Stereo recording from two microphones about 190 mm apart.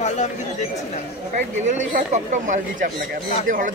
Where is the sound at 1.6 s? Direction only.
40° right (ahead or behind).